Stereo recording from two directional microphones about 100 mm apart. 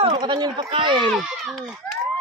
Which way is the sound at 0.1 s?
45° right (ahead or behind).